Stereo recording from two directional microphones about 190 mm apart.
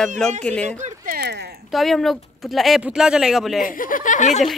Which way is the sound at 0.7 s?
40° right (ahead or behind).